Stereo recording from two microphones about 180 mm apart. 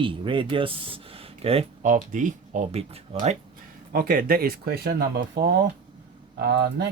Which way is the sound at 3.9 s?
55° right (ahead or behind).